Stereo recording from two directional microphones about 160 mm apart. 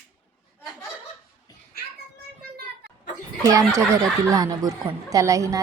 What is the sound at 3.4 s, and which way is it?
A woman's voice, 20° right (ahead or behind).